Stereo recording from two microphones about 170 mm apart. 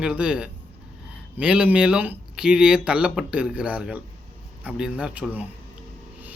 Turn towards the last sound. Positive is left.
turn(degrees=-10)  # may be behind; listen again after turning